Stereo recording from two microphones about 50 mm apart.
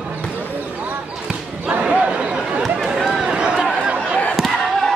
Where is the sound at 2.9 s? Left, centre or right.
Centre.